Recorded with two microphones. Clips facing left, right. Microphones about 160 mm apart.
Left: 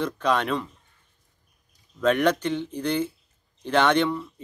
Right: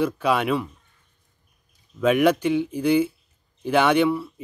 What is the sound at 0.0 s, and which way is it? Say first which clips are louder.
Speech: right 3 dB; 10° right (ahead or behind).